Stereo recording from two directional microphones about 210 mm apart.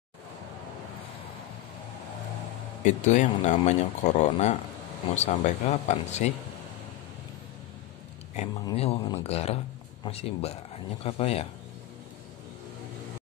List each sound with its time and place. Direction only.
2.8 s speech: 35° left (ahead or behind)
8.6 s speech: 25° left (ahead or behind)